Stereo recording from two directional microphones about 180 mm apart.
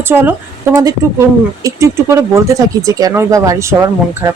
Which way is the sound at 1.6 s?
15° right (ahead or behind).